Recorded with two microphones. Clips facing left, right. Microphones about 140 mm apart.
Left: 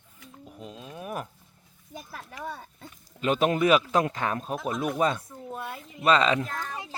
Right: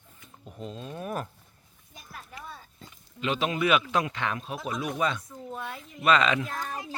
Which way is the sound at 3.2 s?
45° left (ahead or behind).